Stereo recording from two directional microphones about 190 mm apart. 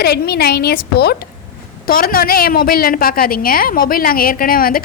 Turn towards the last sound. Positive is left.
turn(degrees=50)  # may be behind; listen again after turning